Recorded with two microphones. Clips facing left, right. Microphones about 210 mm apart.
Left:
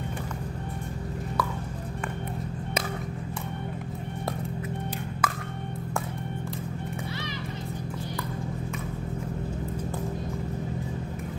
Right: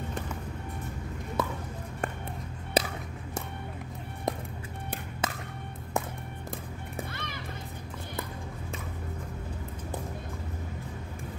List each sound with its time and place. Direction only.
5.2 s music: 25° right (ahead or behind)